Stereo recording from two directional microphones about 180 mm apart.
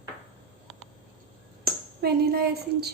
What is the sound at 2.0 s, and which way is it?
Speech, 60° right (ahead or behind).